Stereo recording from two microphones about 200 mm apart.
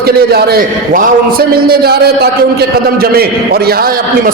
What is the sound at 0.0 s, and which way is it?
A man's voice, 50° right (ahead or behind).